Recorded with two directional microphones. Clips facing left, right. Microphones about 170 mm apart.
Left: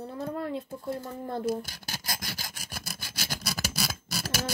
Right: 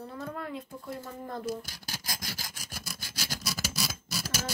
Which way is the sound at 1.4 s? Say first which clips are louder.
Left 5 dB; 60° left (ahead or behind).